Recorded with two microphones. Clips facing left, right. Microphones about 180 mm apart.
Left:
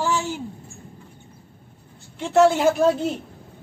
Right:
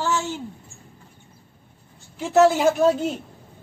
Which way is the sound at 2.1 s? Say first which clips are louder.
Even; centre (ahead or behind).